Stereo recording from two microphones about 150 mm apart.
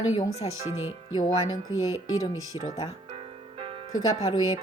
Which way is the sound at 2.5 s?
20° right (ahead or behind).